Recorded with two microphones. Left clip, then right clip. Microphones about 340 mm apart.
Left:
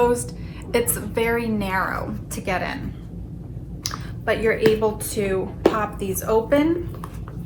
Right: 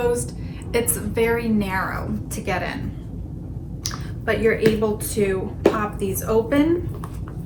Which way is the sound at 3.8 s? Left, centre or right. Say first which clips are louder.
Left 1 dB; centre.